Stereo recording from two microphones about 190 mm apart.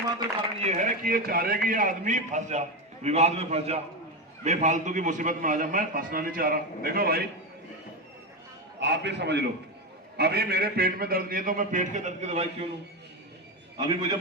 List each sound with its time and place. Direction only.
0.6 s a man's voice: 40° right (ahead or behind)
8.8 s a man's voice: 65° right (ahead or behind); by 12.5 s 35° right (ahead or behind)
13.7 s a man's voice: 25° right (ahead or behind)